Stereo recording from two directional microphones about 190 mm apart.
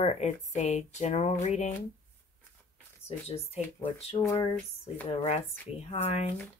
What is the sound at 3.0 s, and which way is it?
Speech, 30° left (ahead or behind).